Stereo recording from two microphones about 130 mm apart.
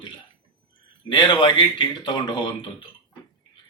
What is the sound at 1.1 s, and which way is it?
Speech, 35° left (ahead or behind).